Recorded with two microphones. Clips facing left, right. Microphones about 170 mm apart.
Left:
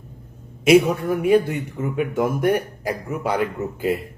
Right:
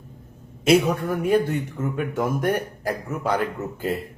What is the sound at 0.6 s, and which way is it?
A man's voice, 10° left (ahead or behind).